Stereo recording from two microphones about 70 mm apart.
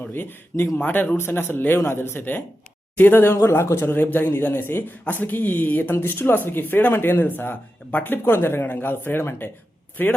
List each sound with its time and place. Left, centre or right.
0.1 s speech: left